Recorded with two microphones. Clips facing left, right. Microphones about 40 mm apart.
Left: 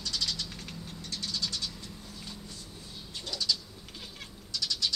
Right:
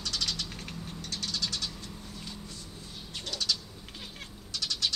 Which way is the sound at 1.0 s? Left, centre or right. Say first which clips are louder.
Right 1 dB; right.